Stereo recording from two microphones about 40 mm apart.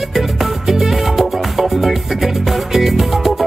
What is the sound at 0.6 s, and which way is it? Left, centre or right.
Music, centre.